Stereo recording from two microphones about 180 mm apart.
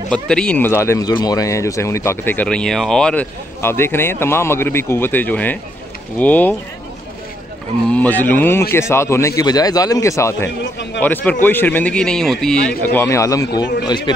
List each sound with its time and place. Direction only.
0.1 s speech: 5° left (ahead or behind)
7.9 s speech: 10° left (ahead or behind)
10.6 s a man's voice: 80° left
11.0 s speech: 10° left (ahead or behind); by 14.1 s 25° left (ahead or behind)